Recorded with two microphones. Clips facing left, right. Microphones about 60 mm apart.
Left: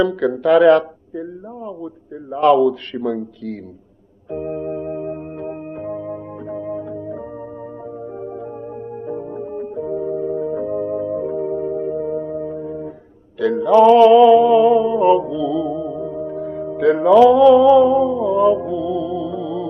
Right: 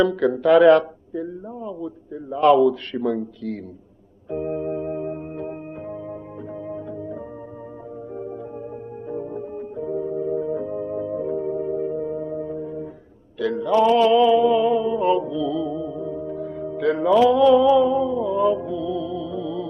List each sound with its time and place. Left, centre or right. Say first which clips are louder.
0.0 s speech: left 1 dB; left
2.4 s a man's voice: left 2 dB; left
4.3 s organ: left 1 dB; left
5.7 s music: left 6 dB; left
13.4 s mantra: left 7 dB; left